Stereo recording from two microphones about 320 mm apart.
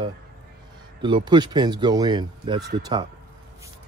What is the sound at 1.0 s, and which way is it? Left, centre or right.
Speech, centre.